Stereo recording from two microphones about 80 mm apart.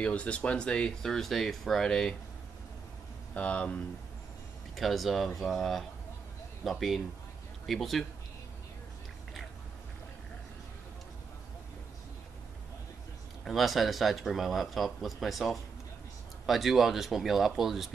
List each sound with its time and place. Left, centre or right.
0.0 s speech: centre
3.3 s speech: centre
4.7 s speech: centre
13.4 s speech: centre